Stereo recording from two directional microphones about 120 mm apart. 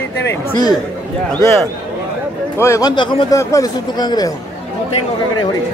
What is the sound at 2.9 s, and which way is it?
Speech, 40° left (ahead or behind).